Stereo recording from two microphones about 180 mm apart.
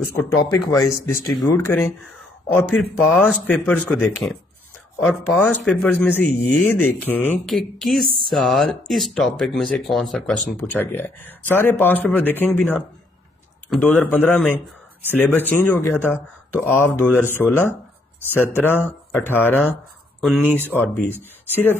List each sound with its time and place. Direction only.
0.5 s speech: 20° left (ahead or behind)
20.2 s speech: centre (ahead or behind)
20.7 s speech: 10° left (ahead or behind)